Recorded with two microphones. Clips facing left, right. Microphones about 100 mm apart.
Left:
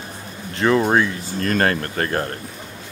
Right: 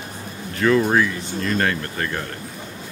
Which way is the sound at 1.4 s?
45° left (ahead or behind).